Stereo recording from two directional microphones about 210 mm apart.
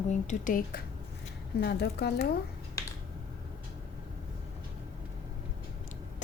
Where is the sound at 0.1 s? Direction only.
35° left (ahead or behind).